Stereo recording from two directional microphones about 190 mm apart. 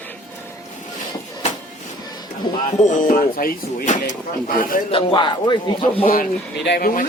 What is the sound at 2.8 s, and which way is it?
A man's voice, 40° left (ahead or behind).